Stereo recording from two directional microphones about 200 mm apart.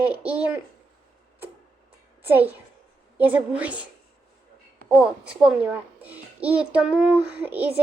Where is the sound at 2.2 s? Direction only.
10° right (ahead or behind).